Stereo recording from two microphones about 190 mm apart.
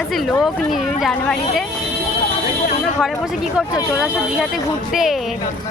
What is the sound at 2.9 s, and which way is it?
Speech, centre (ahead or behind).